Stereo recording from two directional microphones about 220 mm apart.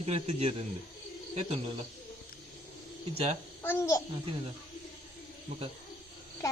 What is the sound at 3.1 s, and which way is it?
Speech, 30° right (ahead or behind).